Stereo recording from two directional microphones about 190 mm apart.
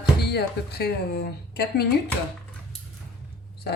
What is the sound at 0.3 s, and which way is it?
Speech, 60° left (ahead or behind).